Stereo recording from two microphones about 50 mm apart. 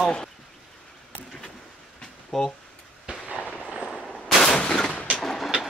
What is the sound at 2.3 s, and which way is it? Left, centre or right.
Speech, centre.